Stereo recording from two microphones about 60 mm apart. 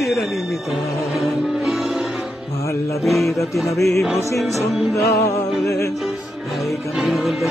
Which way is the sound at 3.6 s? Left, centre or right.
Left.